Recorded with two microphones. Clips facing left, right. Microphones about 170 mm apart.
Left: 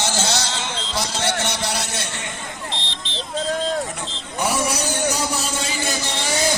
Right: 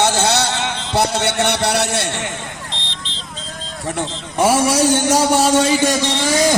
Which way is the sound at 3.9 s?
90° right.